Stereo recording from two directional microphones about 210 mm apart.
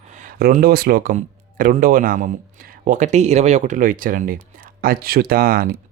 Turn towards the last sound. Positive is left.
turn(degrees=-45)  # may be behind; listen again after turning